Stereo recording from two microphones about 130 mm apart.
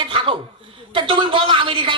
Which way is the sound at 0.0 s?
40° right (ahead or behind).